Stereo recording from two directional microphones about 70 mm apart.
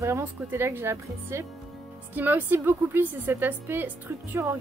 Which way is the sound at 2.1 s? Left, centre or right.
Right.